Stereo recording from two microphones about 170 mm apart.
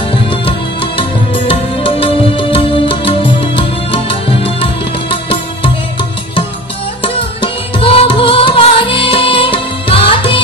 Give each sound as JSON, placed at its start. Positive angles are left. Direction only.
{"t": 0.3, "sound": "music", "side_deg": 30}
{"t": 7.0, "sound": "music", "side_deg": 30}